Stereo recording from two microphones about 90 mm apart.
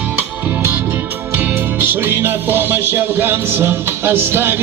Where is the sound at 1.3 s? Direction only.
25° right (ahead or behind).